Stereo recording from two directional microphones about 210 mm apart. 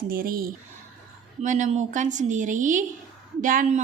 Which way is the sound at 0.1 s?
45° right (ahead or behind).